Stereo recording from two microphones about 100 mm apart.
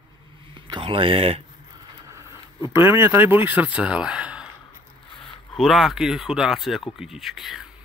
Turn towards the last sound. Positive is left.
turn(degrees=0)  # may be behind; listen again after turning